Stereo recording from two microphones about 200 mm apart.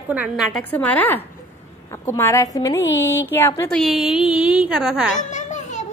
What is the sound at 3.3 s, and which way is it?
Speech, 10° left (ahead or behind).